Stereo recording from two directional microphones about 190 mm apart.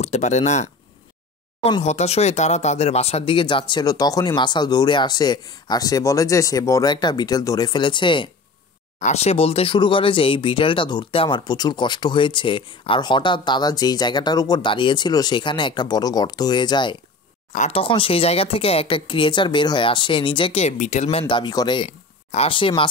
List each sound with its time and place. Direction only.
0.0 s speech: 35° left (ahead or behind)
17.5 s speech: 35° left (ahead or behind)